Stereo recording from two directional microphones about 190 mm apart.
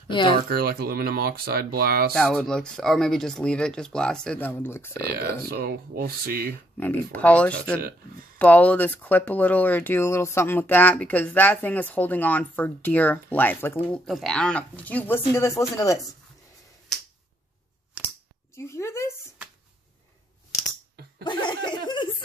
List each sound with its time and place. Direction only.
0.1 s speech: 25° left (ahead or behind)
0.5 s speech: 55° right (ahead or behind)
2.1 s speech: centre (ahead or behind)
5.5 s speech: 55° right (ahead or behind)
6.8 s speech: 10° left (ahead or behind)
18.6 s a sound: 15° left (ahead or behind)
21.2 s laughter: 25° left (ahead or behind)